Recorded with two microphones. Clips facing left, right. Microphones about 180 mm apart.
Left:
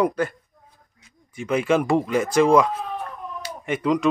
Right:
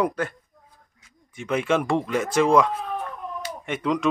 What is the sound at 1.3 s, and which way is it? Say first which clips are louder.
A man's voice: left 2 dB; centre (ahead or behind).